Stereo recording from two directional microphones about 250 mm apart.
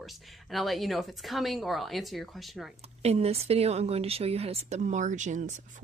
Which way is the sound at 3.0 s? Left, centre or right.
Right.